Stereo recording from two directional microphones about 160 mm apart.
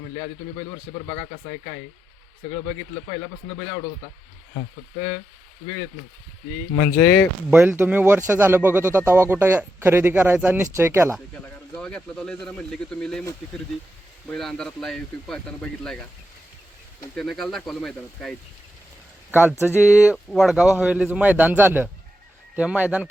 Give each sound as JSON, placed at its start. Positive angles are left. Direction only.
{"t": 1.0, "sound": "speech", "side_deg": 30}
{"t": 6.7, "sound": "speech", "side_deg": 10}
{"t": 7.5, "sound": "speech", "side_deg": -10}
{"t": 11.7, "sound": "speech", "side_deg": 5}
{"t": 14.3, "sound": "speech", "side_deg": 5}
{"t": 17.2, "sound": "speech", "side_deg": 0}
{"t": 19.3, "sound": "speech", "side_deg": -10}